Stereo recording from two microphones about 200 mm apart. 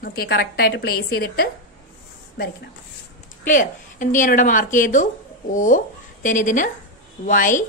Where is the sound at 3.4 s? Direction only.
40° left (ahead or behind).